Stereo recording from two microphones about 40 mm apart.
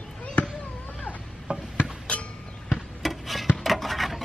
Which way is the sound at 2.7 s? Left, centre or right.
Centre.